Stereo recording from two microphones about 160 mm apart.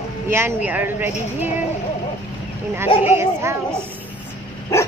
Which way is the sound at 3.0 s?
15° right (ahead or behind).